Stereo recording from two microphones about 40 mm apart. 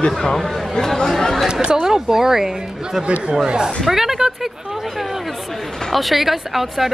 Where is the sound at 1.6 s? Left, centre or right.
Centre.